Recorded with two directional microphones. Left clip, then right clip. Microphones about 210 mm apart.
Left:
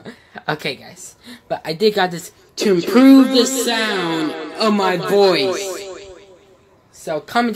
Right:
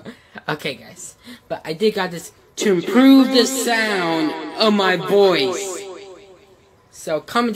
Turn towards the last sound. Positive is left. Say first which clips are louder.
# left 1 dB
turn(degrees=0)  # may be behind; listen again after turning